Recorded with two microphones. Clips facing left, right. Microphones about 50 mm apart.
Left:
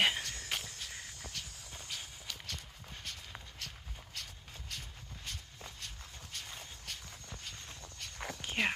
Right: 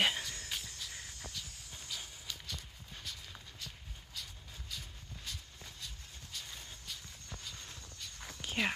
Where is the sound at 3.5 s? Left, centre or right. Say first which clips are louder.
Left 2 dB; left.